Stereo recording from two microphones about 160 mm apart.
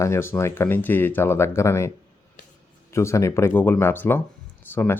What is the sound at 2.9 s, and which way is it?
Speech, 20° left (ahead or behind).